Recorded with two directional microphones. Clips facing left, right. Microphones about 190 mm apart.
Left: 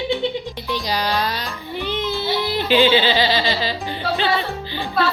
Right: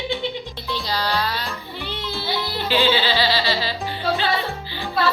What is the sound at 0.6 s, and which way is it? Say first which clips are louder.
Music: left 2 dB; 15° left (ahead or behind).